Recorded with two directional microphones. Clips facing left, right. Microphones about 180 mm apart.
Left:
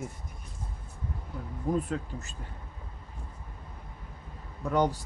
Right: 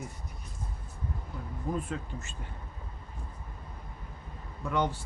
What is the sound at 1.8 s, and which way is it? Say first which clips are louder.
Speech: left 4 dB; 40° left (ahead or behind).